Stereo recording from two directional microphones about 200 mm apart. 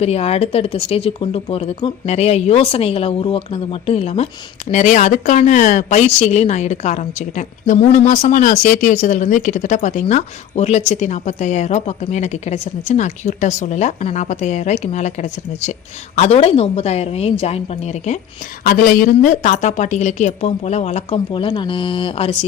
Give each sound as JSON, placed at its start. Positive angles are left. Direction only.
{"t": 0.0, "sound": "speech", "side_deg": 30}
{"t": 18.6, "sound": "speech", "side_deg": 45}